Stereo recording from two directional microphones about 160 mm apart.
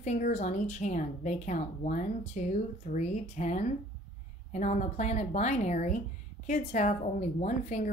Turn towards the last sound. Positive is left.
turn(degrees=50)  # may be behind; listen again after turning